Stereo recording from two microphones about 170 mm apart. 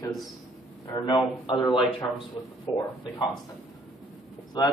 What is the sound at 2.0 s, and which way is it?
Speech, 10° left (ahead or behind).